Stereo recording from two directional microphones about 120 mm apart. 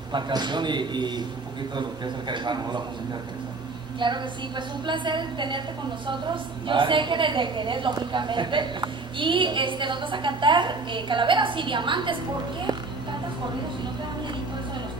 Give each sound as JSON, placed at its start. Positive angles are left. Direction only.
{"t": 0.1, "sound": "a woman's voice", "side_deg": -40}
{"t": 4.0, "sound": "a woman's voice", "side_deg": -40}